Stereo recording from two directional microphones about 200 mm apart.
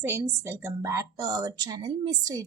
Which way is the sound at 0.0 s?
15° right (ahead or behind).